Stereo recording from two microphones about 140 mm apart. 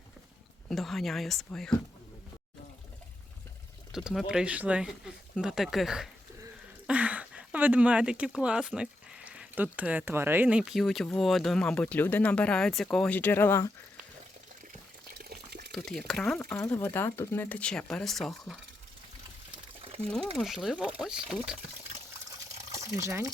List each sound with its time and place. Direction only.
0.7 s speech: centre (ahead or behind)
3.9 s speech: centre (ahead or behind); by 13.6 s 15° left (ahead or behind)
15.2 s water: 90° right
15.7 s speech: 5° left (ahead or behind)
16.6 s speech: 20° left (ahead or behind); by 18.5 s centre (ahead or behind)
19.8 s a sound: 45° right (ahead or behind)
20.3 s speech: centre (ahead or behind)
23.0 s speech: 20° right (ahead or behind)